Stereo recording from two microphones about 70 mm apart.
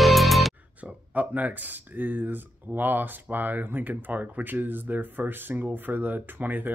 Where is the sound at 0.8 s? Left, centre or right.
Right.